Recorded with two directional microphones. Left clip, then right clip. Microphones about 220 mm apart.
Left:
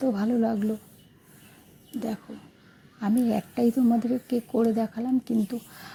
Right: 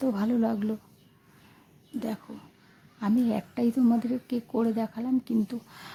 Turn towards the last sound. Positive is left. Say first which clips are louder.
# left 3 dB
turn(degrees=5)  # may be behind; listen again after turning